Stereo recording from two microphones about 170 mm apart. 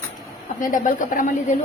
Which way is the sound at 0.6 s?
50° left (ahead or behind).